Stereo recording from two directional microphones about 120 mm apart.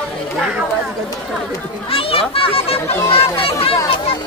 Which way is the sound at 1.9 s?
50° left (ahead or behind).